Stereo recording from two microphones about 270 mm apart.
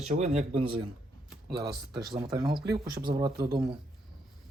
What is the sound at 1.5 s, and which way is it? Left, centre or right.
Speech, right.